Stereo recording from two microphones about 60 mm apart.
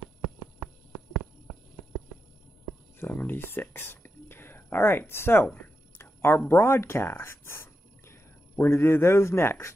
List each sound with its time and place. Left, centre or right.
3.0 s speech: left
5.9 s a sound: left
6.6 s speech: left